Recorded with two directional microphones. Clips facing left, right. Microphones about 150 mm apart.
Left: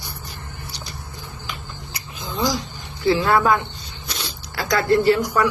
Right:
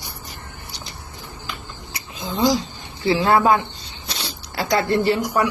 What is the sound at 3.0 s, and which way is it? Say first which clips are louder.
Speech: right 1 dB; 25° right (ahead or behind).